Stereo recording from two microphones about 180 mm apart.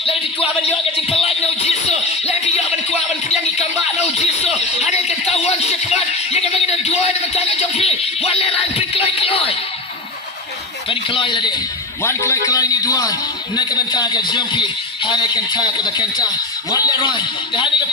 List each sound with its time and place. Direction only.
0.0 s a man's voice: 30° left (ahead or behind)
3.6 s a sound: 40° left (ahead or behind)
4.8 s music: 40° left (ahead or behind)
10.8 s a man's voice: 30° left (ahead or behind)